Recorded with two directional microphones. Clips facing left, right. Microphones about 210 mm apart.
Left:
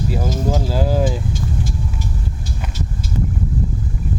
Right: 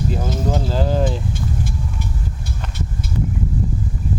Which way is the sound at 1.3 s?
60° right (ahead or behind).